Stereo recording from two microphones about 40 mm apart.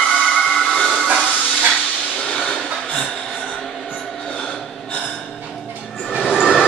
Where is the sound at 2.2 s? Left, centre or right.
Left.